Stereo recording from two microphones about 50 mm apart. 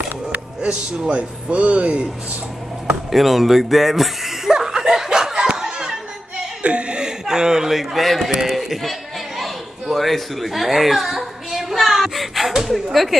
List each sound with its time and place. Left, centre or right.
0.6 s a man's voice: centre
3.1 s snicker: centre
5.6 s a sound: centre
6.6 s speech: right; by 8.9 s centre
9.4 s a sound: centre
12.9 s a woman's voice: centre